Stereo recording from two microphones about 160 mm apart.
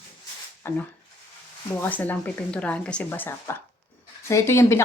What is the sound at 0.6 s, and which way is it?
Speech, 15° left (ahead or behind).